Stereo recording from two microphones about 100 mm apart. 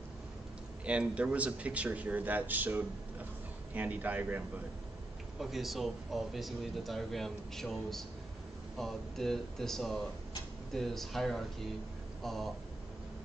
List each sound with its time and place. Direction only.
0.8 s speech: 10° right (ahead or behind)
5.4 s speech: centre (ahead or behind)